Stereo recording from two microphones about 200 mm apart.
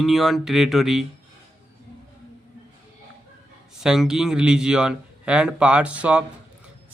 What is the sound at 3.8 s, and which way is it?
Speech, 5° right (ahead or behind).